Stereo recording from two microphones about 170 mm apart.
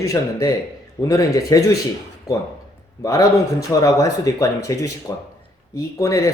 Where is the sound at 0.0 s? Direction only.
20° left (ahead or behind).